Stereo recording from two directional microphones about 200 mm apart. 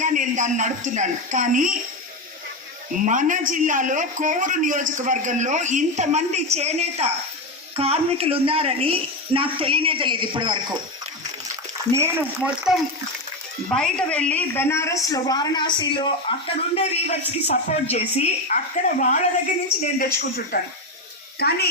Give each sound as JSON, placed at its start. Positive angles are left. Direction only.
{"t": 0.0, "sound": "a man's voice", "side_deg": -40}
{"t": 3.0, "sound": "a man's voice", "side_deg": -40}
{"t": 11.9, "sound": "a woman's voice", "side_deg": -15}